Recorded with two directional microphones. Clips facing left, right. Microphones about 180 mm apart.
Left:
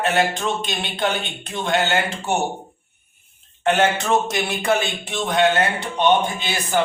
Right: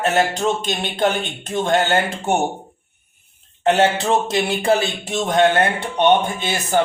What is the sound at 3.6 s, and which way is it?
Speech, 35° right (ahead or behind).